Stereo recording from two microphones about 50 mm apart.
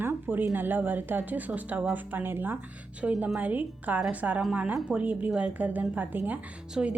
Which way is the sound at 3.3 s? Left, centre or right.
Right.